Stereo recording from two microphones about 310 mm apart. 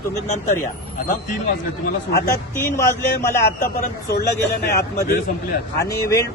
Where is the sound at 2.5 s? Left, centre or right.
Centre.